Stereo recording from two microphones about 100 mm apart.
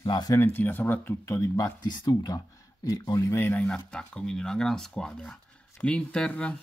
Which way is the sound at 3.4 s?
20° left (ahead or behind).